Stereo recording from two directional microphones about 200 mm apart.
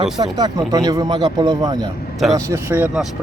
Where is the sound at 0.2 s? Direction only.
20° right (ahead or behind).